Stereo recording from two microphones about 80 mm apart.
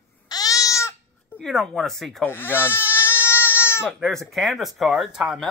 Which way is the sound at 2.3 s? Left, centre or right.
Left.